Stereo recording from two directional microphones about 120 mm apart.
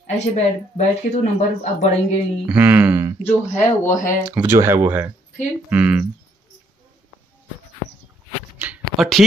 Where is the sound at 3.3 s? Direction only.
15° left (ahead or behind).